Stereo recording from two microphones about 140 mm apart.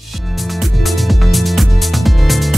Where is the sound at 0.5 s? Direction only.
Centre (ahead or behind).